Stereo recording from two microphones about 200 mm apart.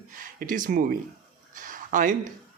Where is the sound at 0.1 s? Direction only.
40° right (ahead or behind).